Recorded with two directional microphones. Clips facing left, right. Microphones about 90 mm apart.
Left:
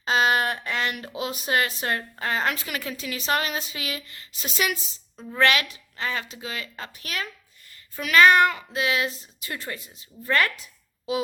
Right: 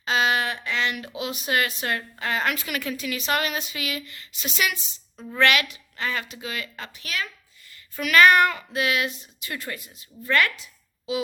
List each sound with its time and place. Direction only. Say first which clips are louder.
0.0 s speech: left 1 dB; 40° left (ahead or behind)
7.9 s a child's voice: even; 20° left (ahead or behind)